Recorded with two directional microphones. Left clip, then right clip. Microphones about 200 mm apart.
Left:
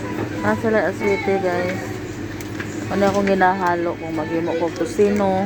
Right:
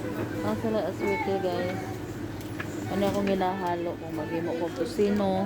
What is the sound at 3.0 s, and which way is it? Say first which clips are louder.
Speech: left 10 dB; centre (ahead or behind).